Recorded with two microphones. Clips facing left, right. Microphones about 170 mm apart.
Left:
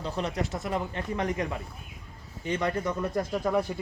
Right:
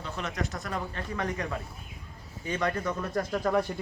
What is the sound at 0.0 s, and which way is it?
Speech, 30° left (ahead or behind).